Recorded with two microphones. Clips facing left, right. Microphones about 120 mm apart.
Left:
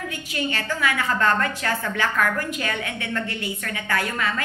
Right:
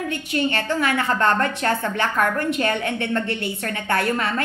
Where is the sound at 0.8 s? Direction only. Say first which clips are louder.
Even; 25° right (ahead or behind).